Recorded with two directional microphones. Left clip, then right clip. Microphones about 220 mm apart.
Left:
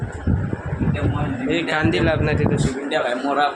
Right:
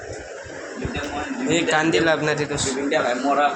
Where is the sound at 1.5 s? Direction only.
10° left (ahead or behind).